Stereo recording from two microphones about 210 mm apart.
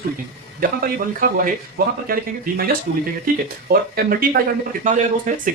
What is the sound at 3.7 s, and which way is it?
Speech, 45° right (ahead or behind).